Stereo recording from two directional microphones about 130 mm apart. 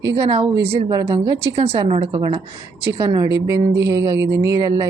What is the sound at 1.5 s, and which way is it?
Speech, 55° right (ahead or behind).